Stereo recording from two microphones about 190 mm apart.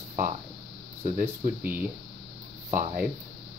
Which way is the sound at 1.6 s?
10° right (ahead or behind).